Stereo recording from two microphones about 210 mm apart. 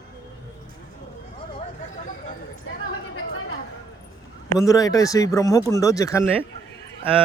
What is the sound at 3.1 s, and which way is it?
Chatter, 75° left (ahead or behind).